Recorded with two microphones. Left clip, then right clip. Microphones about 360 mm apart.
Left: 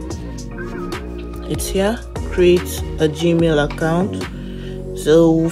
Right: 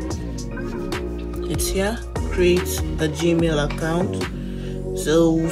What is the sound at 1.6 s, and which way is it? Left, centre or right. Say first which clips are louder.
Speech: left 5 dB; left.